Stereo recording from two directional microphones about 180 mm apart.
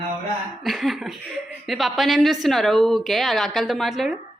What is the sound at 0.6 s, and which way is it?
Speech, centre (ahead or behind).